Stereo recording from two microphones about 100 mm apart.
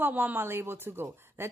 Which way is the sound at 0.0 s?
20° right (ahead or behind).